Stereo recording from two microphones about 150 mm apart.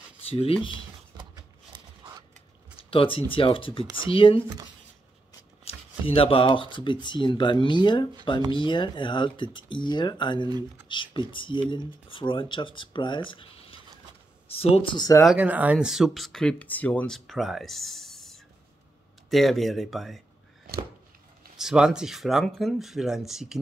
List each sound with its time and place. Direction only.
0.3 s speech: 40° left (ahead or behind)
1.7 s a sound: 25° right (ahead or behind)
2.8 s a sound: 35° left (ahead or behind)
3.3 s speech: 35° left (ahead or behind)
5.7 s speech: 40° left (ahead or behind)
15.3 s speech: 10° right (ahead or behind)
21.5 s speech: 5° right (ahead or behind)